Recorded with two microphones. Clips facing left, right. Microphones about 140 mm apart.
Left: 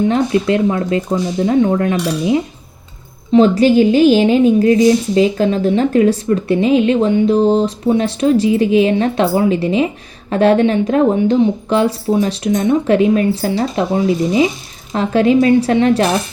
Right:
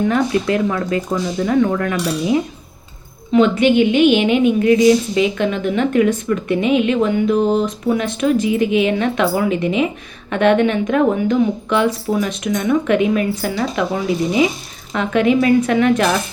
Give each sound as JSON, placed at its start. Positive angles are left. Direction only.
{"t": 0.0, "sound": "speech", "side_deg": 25}
{"t": 3.3, "sound": "a woman's voice", "side_deg": 35}